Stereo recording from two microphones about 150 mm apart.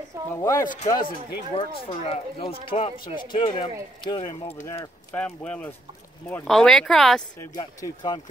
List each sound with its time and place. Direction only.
0.3 s speech: 20° left (ahead or behind)
1.5 s speech: 35° left (ahead or behind)
5.1 s speech: 10° left (ahead or behind)
7.5 s speech: 30° left (ahead or behind)